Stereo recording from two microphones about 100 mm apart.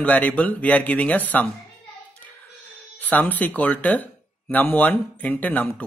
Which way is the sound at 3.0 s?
15° left (ahead or behind).